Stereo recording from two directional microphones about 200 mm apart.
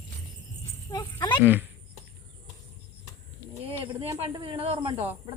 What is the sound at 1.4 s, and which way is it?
Speech, 10° right (ahead or behind).